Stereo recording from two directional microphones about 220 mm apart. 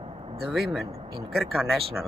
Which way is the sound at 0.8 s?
25° right (ahead or behind).